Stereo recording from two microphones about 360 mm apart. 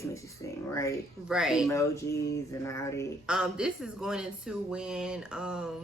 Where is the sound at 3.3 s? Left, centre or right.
Centre.